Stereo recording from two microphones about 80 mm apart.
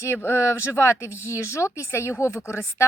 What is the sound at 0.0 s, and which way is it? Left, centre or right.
A woman's voice, left.